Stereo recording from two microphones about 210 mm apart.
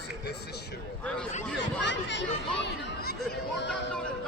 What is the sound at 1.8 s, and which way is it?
A child's voice, 60° left (ahead or behind).